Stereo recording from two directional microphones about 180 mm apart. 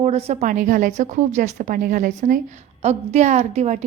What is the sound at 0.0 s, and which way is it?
A woman's voice, 35° right (ahead or behind).